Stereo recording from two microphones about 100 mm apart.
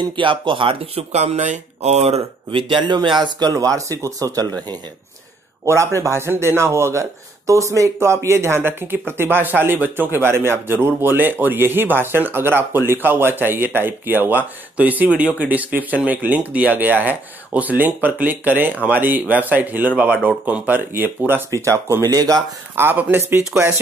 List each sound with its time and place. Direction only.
0.0 s speech: 55° right (ahead or behind); by 4.6 s 35° right (ahead or behind)
5.9 s speech: 25° right (ahead or behind)
22.0 s speech: 40° right (ahead or behind)
22.8 s speech: 20° right (ahead or behind)